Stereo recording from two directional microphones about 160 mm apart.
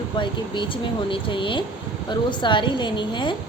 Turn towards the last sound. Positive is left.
turn(degrees=30)  # may be behind; listen again after turning